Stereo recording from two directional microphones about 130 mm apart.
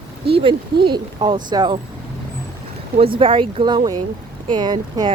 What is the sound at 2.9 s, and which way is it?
A woman's voice, 45° right (ahead or behind).